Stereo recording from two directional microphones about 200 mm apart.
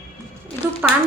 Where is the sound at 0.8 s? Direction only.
10° right (ahead or behind).